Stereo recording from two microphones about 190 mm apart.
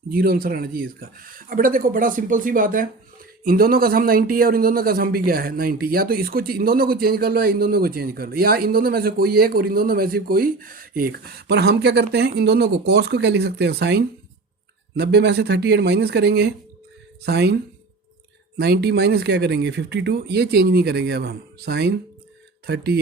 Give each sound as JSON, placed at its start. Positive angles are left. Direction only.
{"t": 0.1, "sound": "speech", "side_deg": -50}